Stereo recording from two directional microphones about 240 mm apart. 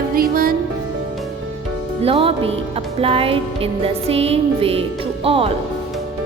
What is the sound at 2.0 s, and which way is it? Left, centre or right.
Music, right.